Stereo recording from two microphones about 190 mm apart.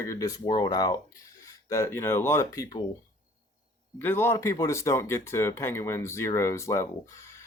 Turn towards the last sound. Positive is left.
turn(degrees=15)  # may be behind; listen again after turning